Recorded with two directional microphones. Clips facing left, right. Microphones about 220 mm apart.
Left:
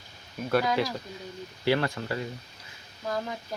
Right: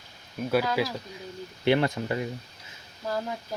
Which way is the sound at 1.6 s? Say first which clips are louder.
Right 3 dB; 20° right (ahead or behind).